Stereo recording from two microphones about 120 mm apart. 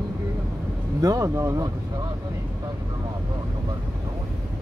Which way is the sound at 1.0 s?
30° right (ahead or behind).